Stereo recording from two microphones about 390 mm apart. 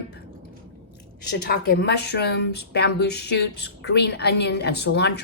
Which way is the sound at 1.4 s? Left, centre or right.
Left.